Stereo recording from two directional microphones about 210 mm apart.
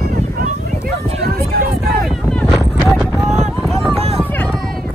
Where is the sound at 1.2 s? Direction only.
45° right (ahead or behind).